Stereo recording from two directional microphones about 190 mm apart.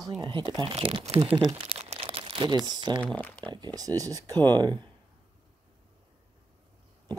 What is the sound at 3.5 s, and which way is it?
Speech, 20° right (ahead or behind).